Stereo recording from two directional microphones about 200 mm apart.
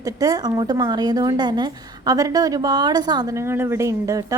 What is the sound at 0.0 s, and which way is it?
A woman's voice, 20° right (ahead or behind).